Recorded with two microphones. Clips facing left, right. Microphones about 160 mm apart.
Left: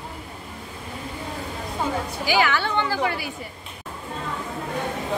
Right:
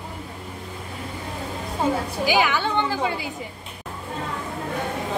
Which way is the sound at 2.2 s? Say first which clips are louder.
Even; 15° right (ahead or behind).